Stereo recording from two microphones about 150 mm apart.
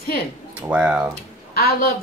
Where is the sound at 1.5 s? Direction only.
90° left.